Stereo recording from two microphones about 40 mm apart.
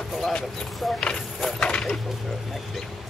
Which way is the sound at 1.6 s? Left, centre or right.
Left.